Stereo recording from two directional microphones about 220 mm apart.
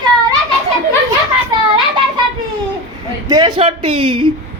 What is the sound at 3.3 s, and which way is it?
Speech, 20° right (ahead or behind).